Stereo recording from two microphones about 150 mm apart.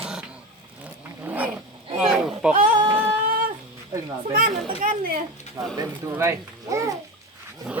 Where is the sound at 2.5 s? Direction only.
65° right (ahead or behind).